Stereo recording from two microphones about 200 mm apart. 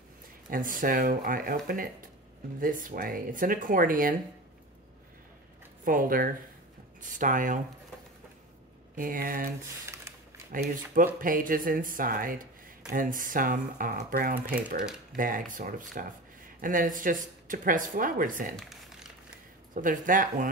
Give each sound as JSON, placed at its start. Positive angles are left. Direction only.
{"t": 0.5, "sound": "speech", "side_deg": -45}
{"t": 5.9, "sound": "speech", "side_deg": -45}
{"t": 8.9, "sound": "speech", "side_deg": -45}
{"t": 9.8, "sound": "a sound", "side_deg": -15}
{"t": 10.5, "sound": "speech", "side_deg": -45}
{"t": 19.7, "sound": "speech", "side_deg": -40}